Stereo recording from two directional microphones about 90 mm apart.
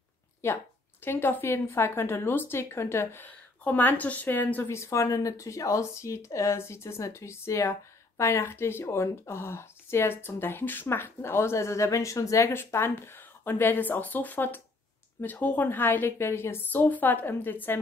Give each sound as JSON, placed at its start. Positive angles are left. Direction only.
{"t": 0.4, "sound": "speech", "side_deg": 30}